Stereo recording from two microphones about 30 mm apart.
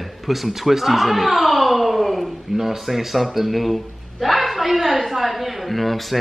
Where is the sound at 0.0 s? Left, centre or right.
Centre.